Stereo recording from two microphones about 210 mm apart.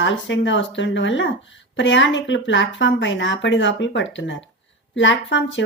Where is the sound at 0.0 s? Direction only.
60° left (ahead or behind).